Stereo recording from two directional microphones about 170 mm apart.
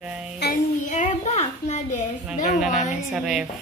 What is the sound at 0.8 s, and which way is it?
A child's voice, 45° left (ahead or behind).